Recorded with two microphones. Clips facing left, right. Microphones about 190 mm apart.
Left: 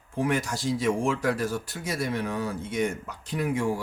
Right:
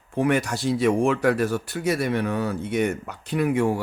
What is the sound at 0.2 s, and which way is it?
Speech, 65° right (ahead or behind).